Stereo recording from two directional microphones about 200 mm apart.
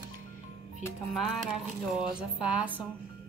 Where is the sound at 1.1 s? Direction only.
Centre (ahead or behind).